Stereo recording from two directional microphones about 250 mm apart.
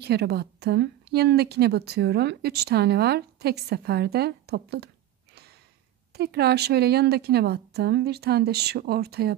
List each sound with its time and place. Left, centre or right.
0.0 s a woman's voice: right
6.1 s a woman's voice: right